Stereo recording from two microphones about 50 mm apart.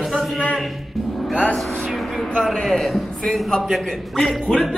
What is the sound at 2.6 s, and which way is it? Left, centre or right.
Speech, centre.